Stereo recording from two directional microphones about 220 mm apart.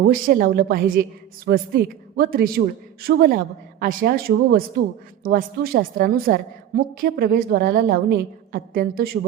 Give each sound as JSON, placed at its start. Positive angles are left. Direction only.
{"t": 0.1, "sound": "a woman's voice", "side_deg": -40}